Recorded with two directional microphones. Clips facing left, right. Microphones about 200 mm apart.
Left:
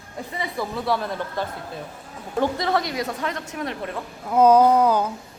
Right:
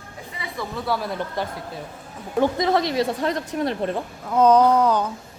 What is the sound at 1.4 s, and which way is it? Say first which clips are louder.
A woman's voice: even; 15° right (ahead or behind).